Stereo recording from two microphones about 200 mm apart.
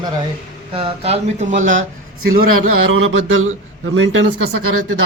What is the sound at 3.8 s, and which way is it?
Speech, 75° right (ahead or behind).